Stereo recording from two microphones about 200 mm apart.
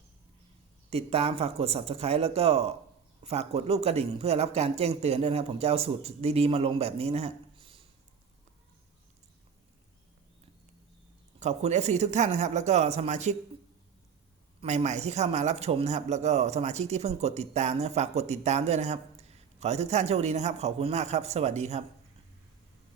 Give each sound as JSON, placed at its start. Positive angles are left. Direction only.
{"t": 0.9, "sound": "speech", "side_deg": -30}
{"t": 11.3, "sound": "speech", "side_deg": -35}
{"t": 14.6, "sound": "speech", "side_deg": -35}